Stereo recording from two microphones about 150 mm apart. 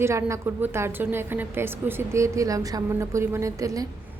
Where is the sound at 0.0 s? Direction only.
20° right (ahead or behind).